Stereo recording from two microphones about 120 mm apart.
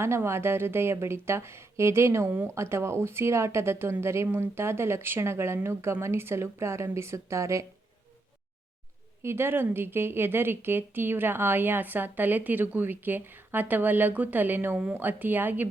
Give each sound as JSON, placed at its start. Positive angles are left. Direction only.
{"t": 0.0, "sound": "speech", "side_deg": -20}
{"t": 9.2, "sound": "a woman's voice", "side_deg": -20}